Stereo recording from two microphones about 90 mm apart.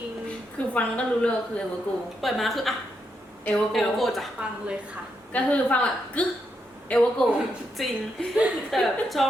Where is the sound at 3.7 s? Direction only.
Centre (ahead or behind).